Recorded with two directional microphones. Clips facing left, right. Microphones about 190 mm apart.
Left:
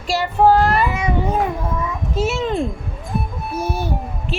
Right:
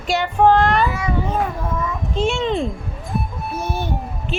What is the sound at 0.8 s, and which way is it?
Speech, 20° left (ahead or behind).